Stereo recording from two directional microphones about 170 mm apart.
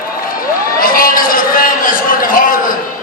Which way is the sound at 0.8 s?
55° left (ahead or behind).